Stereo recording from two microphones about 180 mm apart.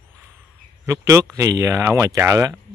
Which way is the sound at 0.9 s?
15° right (ahead or behind).